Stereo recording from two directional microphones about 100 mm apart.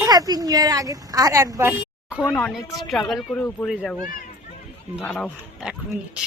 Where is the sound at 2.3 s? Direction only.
5° left (ahead or behind).